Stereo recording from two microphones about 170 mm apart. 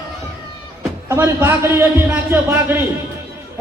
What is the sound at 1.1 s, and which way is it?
A man's voice, 15° right (ahead or behind).